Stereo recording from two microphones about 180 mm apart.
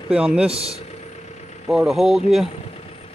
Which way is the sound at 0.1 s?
5° right (ahead or behind).